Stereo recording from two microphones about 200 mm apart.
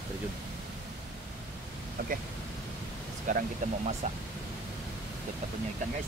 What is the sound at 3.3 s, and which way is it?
Speech, 40° right (ahead or behind).